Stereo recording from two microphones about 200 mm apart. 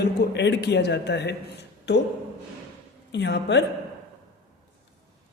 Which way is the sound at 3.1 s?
60° left (ahead or behind).